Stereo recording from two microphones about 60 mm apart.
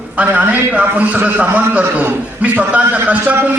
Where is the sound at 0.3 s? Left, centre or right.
Right.